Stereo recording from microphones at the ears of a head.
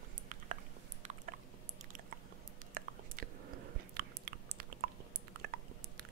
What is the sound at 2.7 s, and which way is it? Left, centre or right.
Chewing, right.